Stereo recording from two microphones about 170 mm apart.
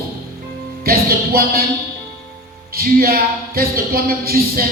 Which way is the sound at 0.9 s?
60° right (ahead or behind).